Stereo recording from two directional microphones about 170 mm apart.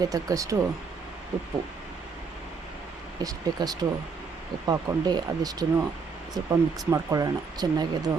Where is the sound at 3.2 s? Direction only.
20° right (ahead or behind).